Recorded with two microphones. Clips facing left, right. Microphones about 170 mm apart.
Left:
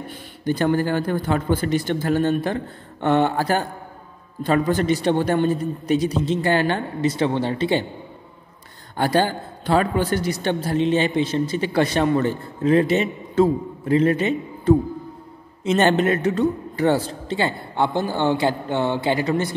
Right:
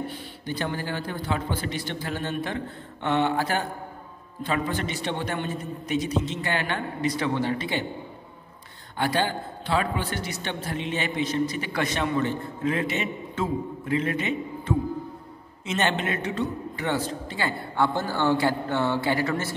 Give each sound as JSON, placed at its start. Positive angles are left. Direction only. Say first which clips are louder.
{"t": 0.5, "sound": "a man's voice", "louder": "left 10 dB", "side_deg": 50}
{"t": 8.9, "sound": "a man's voice", "louder": "left 6 dB", "side_deg": 40}
{"t": 17.3, "sound": "speech", "louder": "left 6 dB", "side_deg": 25}